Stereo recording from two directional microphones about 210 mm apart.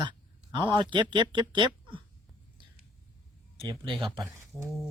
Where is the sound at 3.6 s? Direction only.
20° right (ahead or behind).